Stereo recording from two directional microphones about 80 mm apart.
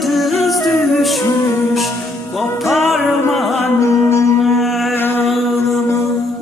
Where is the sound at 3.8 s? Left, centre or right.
Left.